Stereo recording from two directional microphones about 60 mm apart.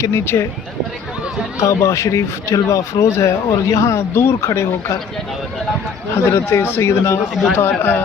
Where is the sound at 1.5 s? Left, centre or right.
Left.